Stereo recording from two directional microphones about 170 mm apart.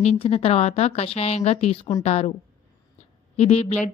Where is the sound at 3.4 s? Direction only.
35° left (ahead or behind).